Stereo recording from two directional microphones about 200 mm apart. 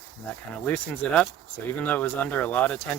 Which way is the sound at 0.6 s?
5° left (ahead or behind).